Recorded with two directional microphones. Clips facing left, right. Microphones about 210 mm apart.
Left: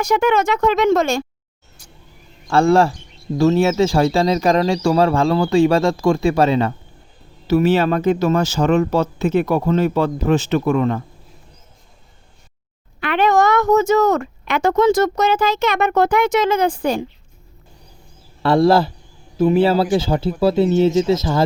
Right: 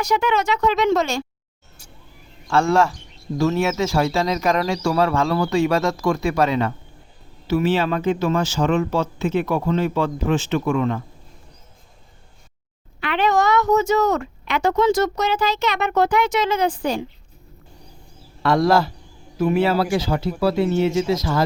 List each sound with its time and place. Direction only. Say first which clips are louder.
0.0 s speech: left 4 dB; 50° left (ahead or behind)
2.5 s speech: left 4 dB; 35° left (ahead or behind)
7.4 s speech: left 4 dB; 40° left (ahead or behind)
13.0 s speech: left 4 dB; 50° left (ahead or behind)
18.4 s speech: left 3 dB; 30° left (ahead or behind)